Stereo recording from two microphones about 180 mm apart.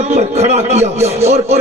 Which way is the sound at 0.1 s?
40° right (ahead or behind).